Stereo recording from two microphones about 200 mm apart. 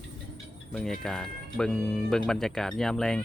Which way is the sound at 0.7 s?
Centre (ahead or behind).